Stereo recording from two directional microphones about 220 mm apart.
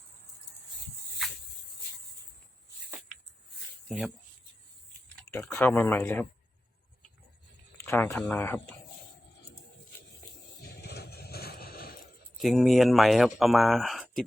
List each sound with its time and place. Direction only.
3.8 s speech: centre (ahead or behind)
5.3 s speech: 10° left (ahead or behind)
7.8 s speech: 10° left (ahead or behind)
10.6 s a sound: 45° left (ahead or behind)
12.4 s speech: centre (ahead or behind)